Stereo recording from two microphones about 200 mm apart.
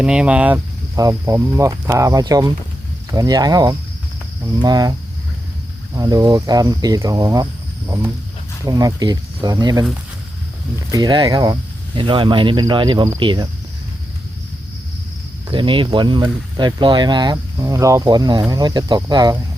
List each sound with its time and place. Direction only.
0.0 s speech: 5° right (ahead or behind)
8.6 s speech: 20° right (ahead or behind)
10.9 s speech: 20° right (ahead or behind)
15.4 s speech: 25° right (ahead or behind)